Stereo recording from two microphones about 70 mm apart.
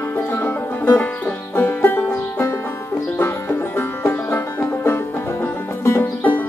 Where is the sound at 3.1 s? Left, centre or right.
Left.